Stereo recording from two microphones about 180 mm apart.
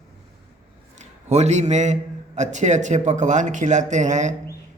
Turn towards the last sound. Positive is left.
turn(degrees=-40)  # may be behind; listen again after turning